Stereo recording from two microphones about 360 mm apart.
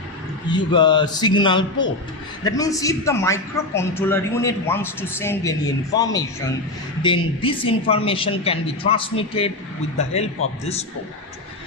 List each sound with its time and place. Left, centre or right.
0.5 s a man's voice: centre